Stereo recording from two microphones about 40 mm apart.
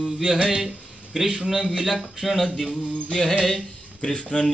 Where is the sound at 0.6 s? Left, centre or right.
Centre.